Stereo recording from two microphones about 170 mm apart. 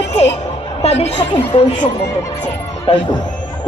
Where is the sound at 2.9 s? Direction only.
35° left (ahead or behind).